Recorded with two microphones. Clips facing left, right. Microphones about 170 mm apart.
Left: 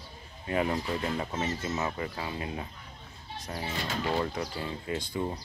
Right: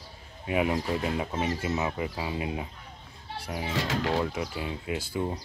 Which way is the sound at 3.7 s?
90° right.